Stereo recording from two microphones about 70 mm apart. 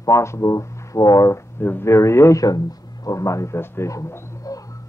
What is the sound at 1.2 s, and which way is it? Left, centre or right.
Speech, left.